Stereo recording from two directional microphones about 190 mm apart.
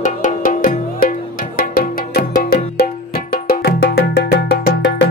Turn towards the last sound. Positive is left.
turn(degrees=60)  # may be behind; listen again after turning